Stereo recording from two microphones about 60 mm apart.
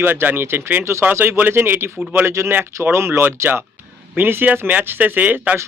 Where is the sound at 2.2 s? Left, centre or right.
Right.